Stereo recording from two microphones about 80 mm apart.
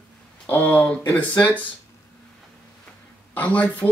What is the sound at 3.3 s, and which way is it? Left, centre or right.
Speech, centre.